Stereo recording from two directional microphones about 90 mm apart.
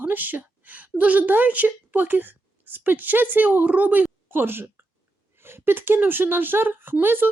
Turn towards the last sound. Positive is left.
turn(degrees=-25)  # may be behind; listen again after turning